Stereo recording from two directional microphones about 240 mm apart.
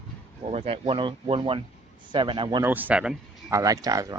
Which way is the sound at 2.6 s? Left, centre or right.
Centre.